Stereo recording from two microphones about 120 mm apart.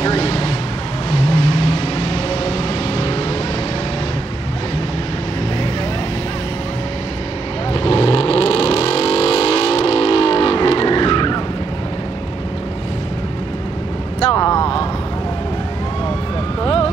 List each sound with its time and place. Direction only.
0.0 s vehicle: 50° left (ahead or behind)
7.7 s vehicle: 50° left (ahead or behind)
14.3 s vehicle: 30° left (ahead or behind)
16.6 s vehicle: 50° left (ahead or behind)